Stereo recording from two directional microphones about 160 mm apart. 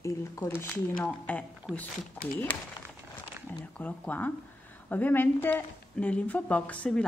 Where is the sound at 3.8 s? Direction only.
10° left (ahead or behind).